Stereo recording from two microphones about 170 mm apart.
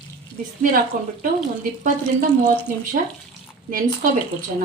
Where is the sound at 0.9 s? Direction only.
50° right (ahead or behind).